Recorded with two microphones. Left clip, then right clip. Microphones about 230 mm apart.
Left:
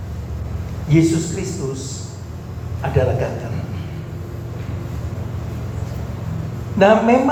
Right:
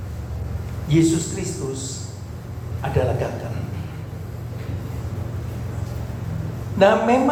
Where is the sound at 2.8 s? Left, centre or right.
Left.